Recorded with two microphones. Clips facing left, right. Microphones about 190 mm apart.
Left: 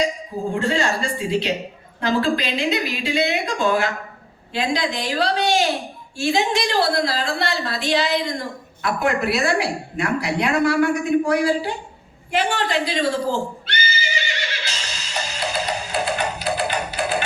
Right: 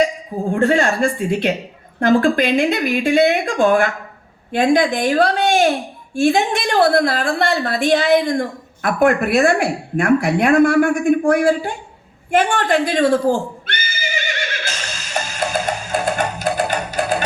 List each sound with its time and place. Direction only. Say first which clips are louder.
0.5 s a woman's voice: right 6 dB; 55° right (ahead or behind)
12.3 s neigh: right 5 dB; 50° right (ahead or behind)